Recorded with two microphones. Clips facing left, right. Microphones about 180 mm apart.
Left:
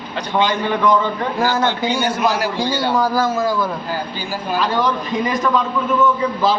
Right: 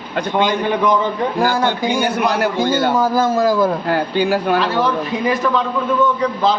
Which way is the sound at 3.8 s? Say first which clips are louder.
Right 8 dB; 65° right (ahead or behind).